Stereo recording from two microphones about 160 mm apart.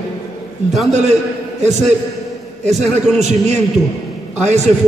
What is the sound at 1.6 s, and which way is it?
A man's voice, 45° right (ahead or behind).